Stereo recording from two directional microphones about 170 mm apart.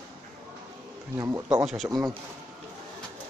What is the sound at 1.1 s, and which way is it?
Speech, 15° right (ahead or behind).